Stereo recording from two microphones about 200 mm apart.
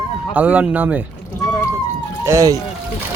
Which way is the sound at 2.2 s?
15° right (ahead or behind).